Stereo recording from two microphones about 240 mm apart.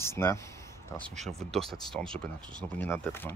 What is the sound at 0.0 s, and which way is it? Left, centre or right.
Speech, centre.